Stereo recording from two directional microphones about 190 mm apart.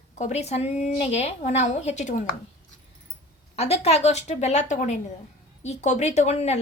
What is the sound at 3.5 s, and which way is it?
A woman's voice, 35° left (ahead or behind).